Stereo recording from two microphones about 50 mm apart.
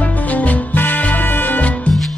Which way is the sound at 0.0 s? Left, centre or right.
Left.